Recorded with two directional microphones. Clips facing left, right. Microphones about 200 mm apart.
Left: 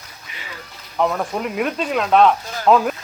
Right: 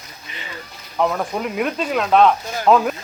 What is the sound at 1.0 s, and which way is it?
Speech, centre (ahead or behind).